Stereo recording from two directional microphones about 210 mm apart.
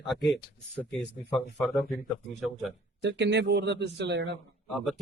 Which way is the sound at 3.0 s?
55° right (ahead or behind).